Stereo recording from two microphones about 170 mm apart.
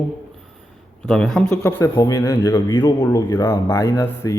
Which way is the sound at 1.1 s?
5° left (ahead or behind).